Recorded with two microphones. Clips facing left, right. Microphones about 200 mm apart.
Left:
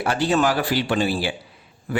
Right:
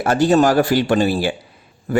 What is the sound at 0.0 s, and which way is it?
A man's voice, 45° right (ahead or behind).